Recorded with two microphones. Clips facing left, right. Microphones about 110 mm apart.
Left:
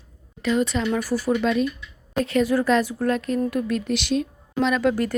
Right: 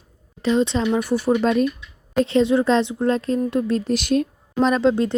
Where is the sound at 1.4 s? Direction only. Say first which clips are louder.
Right 3 dB; 40° right (ahead or behind).